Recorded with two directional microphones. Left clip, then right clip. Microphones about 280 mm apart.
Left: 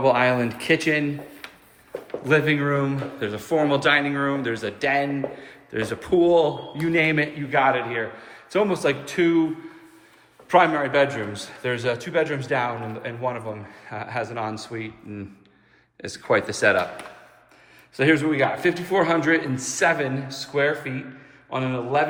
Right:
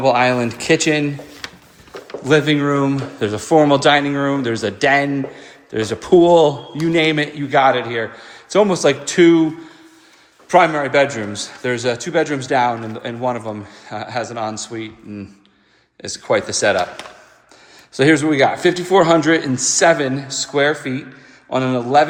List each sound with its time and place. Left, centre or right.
0.0 s speech: centre
10.5 s speech: centre
17.9 s a man's voice: centre